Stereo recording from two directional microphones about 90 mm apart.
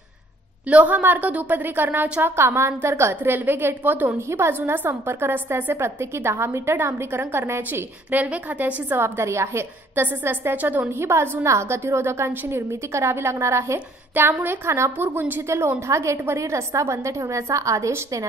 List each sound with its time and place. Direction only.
0.7 s a woman's voice: 15° right (ahead or behind)
8.8 s a woman's voice: 25° right (ahead or behind)